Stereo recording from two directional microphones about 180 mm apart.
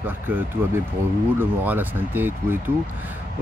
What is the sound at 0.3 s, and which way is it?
Speech, 10° right (ahead or behind).